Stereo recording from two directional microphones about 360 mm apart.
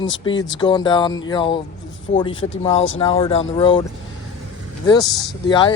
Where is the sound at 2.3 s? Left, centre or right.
Left.